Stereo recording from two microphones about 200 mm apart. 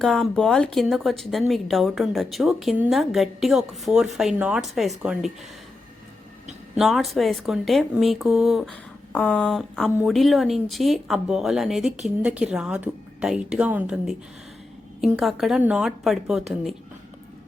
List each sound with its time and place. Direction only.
0.0 s speech: centre (ahead or behind)
6.7 s speech: centre (ahead or behind)